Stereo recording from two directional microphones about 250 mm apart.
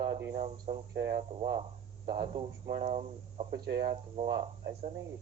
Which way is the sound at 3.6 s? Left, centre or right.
Right.